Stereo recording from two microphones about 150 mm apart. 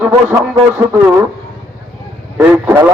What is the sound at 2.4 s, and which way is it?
Speech, 15° right (ahead or behind).